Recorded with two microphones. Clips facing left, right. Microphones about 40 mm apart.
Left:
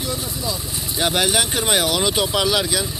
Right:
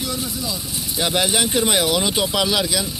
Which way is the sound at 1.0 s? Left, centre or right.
Left.